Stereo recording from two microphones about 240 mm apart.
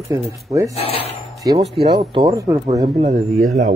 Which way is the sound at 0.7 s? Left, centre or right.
Left.